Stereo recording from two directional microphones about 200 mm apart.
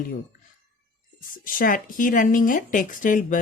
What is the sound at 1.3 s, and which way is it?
Speech, 45° left (ahead or behind).